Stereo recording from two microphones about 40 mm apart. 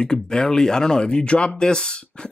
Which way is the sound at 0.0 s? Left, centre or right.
Centre.